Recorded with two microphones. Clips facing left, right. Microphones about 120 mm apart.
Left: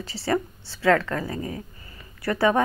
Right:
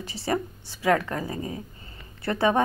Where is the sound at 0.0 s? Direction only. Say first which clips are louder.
Left 2 dB; 15° right (ahead or behind).